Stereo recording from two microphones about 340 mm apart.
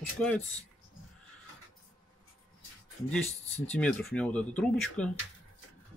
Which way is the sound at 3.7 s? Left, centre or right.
Centre.